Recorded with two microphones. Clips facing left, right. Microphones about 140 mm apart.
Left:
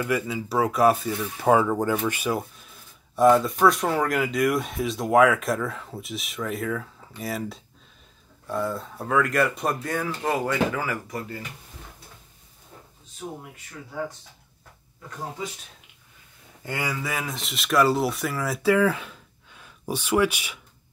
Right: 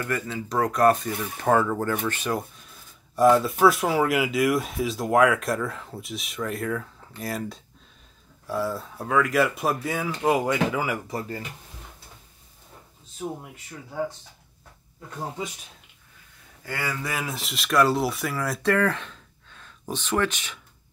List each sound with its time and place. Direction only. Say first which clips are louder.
0.0 s speech: left 3 dB; 10° left (ahead or behind); by 11.0 s 15° right (ahead or behind)
11.1 s speech: right 2 dB; 30° right (ahead or behind)
16.6 s speech: left 1 dB; 20° left (ahead or behind)
16.9 s speech: even; centre (ahead or behind)